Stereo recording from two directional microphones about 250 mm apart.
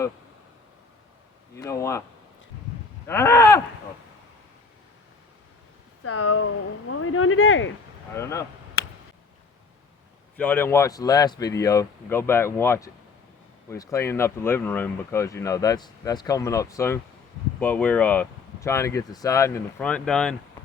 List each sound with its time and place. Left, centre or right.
1.5 s speech: centre
3.1 s speech: centre
6.0 s speech: left
8.1 s speech: centre
10.3 s speech: centre